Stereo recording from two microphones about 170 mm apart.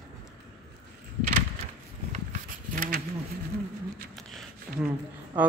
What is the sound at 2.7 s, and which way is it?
Bee, 55° right (ahead or behind).